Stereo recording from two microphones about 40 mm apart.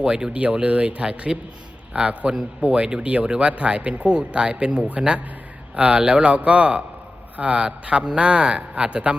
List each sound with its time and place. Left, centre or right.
0.0 s a man's voice: right
0.3 s a man's voice: right